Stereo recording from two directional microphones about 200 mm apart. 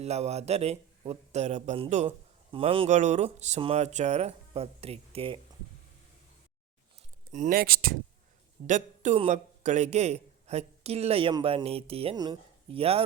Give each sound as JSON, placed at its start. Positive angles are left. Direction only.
{"t": 0.0, "sound": "a man's voice", "side_deg": -30}
{"t": 7.3, "sound": "a man's voice", "side_deg": -40}